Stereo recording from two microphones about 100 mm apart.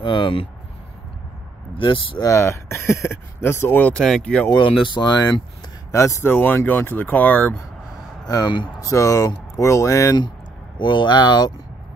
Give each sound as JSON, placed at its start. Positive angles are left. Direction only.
{"t": 0.0, "sound": "speech", "side_deg": 55}
{"t": 1.8, "sound": "speech", "side_deg": 55}
{"t": 2.2, "sound": "speech", "side_deg": 30}
{"t": 4.5, "sound": "speech", "side_deg": 55}
{"t": 5.9, "sound": "speech", "side_deg": 30}
{"t": 6.3, "sound": "speech", "side_deg": 20}
{"t": 8.3, "sound": "speech", "side_deg": 40}
{"t": 10.8, "sound": "speech", "side_deg": 50}